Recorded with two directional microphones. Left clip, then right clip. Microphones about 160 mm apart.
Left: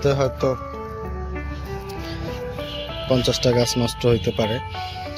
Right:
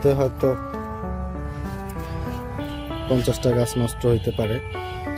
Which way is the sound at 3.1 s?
25° right (ahead or behind).